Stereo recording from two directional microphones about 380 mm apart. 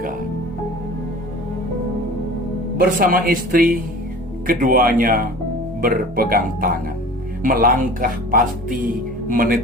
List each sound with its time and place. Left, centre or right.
2.7 s speech: right